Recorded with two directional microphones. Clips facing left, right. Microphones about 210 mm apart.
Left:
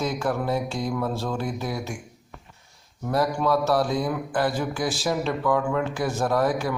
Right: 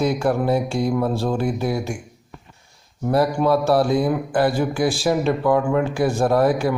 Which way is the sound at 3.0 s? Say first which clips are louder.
Right 5 dB; 30° right (ahead or behind).